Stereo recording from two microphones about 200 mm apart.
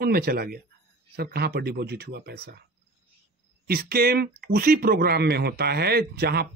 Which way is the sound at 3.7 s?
50° right (ahead or behind).